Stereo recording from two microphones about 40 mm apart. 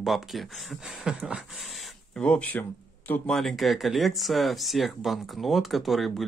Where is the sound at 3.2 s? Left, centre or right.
Centre.